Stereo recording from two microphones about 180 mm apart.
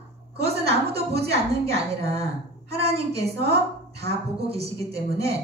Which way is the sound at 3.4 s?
65° right (ahead or behind).